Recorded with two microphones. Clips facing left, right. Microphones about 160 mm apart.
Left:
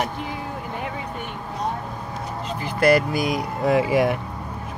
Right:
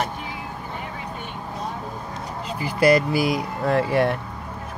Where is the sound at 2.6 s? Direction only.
5° right (ahead or behind).